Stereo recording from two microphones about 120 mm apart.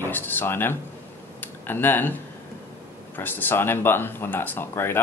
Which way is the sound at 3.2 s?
15° left (ahead or behind).